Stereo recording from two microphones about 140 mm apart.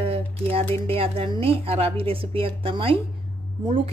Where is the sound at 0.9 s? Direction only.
40° right (ahead or behind).